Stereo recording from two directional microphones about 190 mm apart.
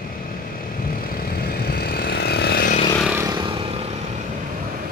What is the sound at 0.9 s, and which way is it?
Vehicle, 50° left (ahead or behind).